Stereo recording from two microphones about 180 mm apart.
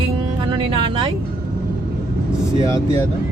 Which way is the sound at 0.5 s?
25° right (ahead or behind).